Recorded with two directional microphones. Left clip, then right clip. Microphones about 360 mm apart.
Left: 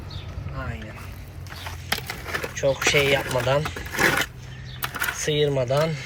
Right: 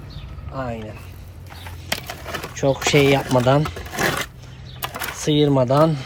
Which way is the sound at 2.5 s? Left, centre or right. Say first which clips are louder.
Right 3 dB; centre.